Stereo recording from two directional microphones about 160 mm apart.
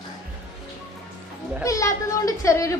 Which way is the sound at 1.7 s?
20° left (ahead or behind).